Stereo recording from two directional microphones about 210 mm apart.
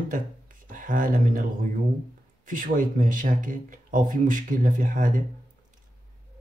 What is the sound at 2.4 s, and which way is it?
Speech, 40° right (ahead or behind).